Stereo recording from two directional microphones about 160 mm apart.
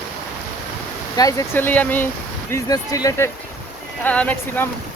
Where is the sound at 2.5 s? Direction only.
20° left (ahead or behind).